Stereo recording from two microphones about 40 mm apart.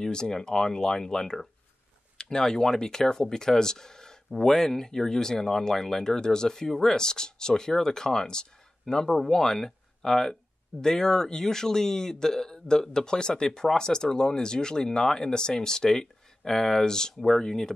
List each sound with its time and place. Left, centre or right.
0.0 s a man's voice: centre